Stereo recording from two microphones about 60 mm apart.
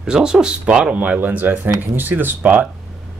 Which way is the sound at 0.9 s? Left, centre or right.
Right.